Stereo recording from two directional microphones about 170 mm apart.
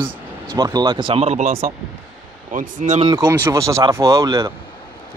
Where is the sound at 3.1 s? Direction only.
15° right (ahead or behind).